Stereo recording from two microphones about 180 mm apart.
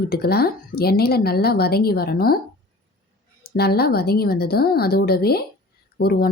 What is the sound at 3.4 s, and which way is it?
Speech, 60° left (ahead or behind).